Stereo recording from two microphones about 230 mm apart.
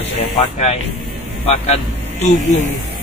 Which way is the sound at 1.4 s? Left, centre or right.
Left.